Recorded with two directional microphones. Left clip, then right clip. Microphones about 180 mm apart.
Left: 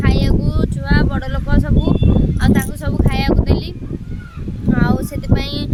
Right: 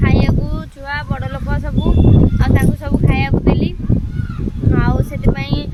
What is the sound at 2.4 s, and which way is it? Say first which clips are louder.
Speech: even; 15° left (ahead or behind).